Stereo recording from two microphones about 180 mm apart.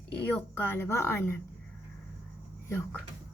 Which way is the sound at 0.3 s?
10° left (ahead or behind).